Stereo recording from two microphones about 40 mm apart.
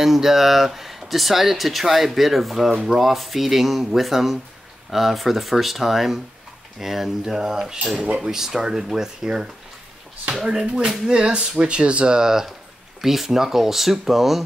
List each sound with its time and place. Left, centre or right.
0.0 s speech: centre; by 12.2 s right
12.2 s speech: centre